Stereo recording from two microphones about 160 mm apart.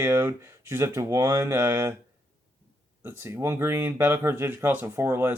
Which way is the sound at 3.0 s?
15° right (ahead or behind).